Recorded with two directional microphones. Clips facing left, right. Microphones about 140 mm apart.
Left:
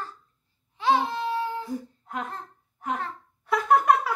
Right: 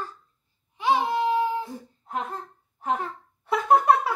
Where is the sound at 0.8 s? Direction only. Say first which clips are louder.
Right 1 dB; 15° right (ahead or behind).